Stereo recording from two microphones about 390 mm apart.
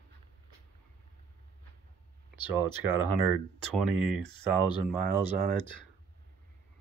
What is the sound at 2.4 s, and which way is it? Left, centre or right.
Speech, centre.